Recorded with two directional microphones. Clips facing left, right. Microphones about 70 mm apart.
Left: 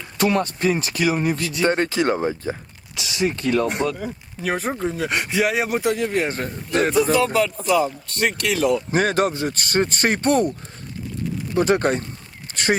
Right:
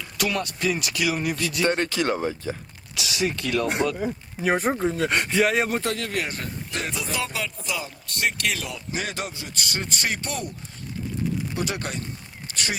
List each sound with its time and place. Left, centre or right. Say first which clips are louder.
0.0 s speech: left 6 dB; left
1.5 s speech: left 1 dB; centre
2.9 s speech: left 3 dB; left
3.7 s speech: left 1 dB; centre
6.2 s speech: left 6 dB; left
8.6 s speech: left 12 dB; left
11.5 s speech: left 11 dB; left
12.5 s a sound: left 2 dB; left